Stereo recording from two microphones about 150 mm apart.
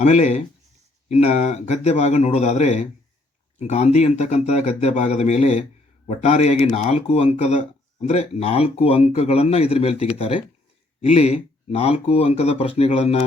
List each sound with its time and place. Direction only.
0.0 s speech: 50° left (ahead or behind)